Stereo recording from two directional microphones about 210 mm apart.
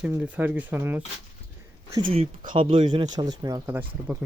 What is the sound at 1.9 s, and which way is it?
Speech, 25° right (ahead or behind).